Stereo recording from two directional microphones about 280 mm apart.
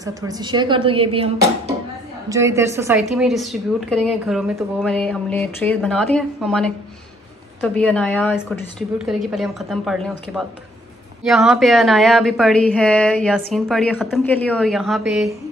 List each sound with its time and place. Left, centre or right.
0.0 s a woman's voice: centre